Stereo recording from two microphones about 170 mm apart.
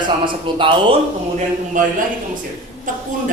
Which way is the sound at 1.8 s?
50° right (ahead or behind).